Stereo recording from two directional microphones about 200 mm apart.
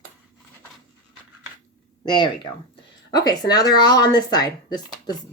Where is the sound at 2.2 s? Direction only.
20° left (ahead or behind).